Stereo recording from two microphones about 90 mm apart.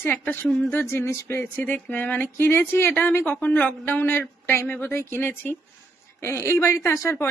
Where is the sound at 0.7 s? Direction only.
30° left (ahead or behind).